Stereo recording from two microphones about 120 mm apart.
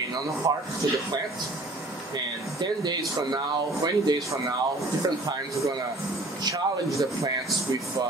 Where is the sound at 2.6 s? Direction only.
35° right (ahead or behind).